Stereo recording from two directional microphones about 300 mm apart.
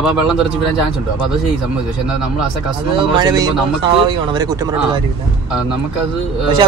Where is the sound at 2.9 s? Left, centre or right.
Centre.